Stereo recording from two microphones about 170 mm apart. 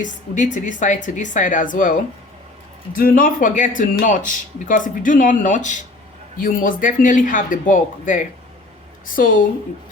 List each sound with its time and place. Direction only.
0.0 s speech: 45° left (ahead or behind)